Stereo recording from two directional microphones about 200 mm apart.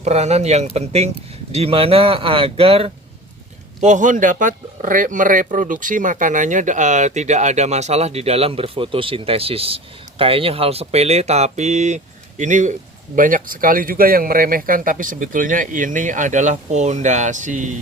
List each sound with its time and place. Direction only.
0.0 s speech: 35° right (ahead or behind)